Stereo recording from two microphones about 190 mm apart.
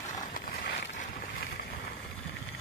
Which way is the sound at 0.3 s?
60° left (ahead or behind).